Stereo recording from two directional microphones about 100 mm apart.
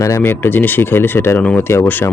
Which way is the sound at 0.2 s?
20° left (ahead or behind).